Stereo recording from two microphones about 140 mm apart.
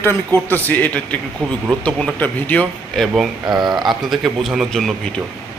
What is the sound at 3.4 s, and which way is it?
Speech, 30° right (ahead or behind).